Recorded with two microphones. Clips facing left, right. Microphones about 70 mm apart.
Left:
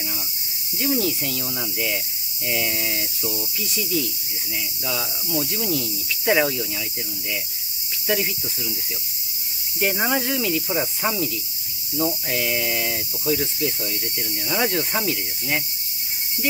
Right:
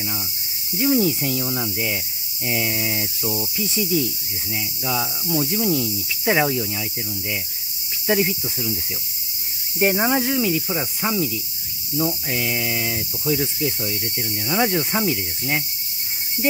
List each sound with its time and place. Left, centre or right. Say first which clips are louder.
0.7 s cricket: right 4 dB; centre
8.1 s cricket: right 4 dB; centre
9.9 s cricket: right 3 dB; centre